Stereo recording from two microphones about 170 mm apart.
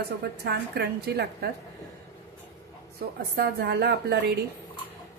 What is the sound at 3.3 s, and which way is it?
Speech, 70° right (ahead or behind).